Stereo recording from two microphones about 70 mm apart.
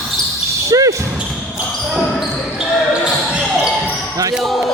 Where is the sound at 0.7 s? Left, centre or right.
Right.